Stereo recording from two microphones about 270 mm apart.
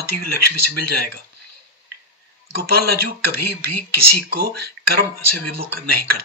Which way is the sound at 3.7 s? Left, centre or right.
Right.